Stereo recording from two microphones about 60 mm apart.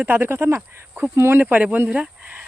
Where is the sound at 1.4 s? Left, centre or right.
Right.